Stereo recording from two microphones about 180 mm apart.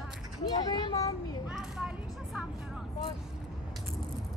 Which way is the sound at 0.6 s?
20° left (ahead or behind).